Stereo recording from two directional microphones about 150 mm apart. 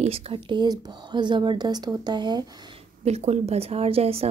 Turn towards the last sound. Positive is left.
turn(degrees=-40)  # may be behind; listen again after turning